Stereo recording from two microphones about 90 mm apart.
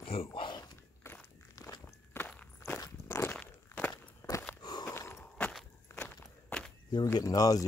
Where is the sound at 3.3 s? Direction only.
15° left (ahead or behind).